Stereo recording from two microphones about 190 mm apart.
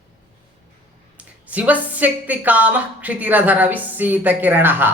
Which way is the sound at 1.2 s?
10° right (ahead or behind).